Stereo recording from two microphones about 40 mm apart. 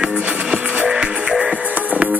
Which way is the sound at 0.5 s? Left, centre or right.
Right.